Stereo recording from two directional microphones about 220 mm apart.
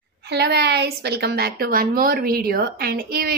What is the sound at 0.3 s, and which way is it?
A woman's voice, 50° right (ahead or behind).